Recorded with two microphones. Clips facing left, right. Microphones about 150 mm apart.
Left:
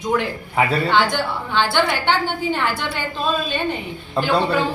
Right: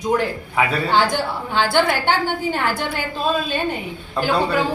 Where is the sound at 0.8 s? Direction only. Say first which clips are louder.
Even; 40° right (ahead or behind).